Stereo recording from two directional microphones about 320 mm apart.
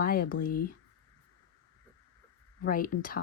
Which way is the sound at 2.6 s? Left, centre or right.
Left.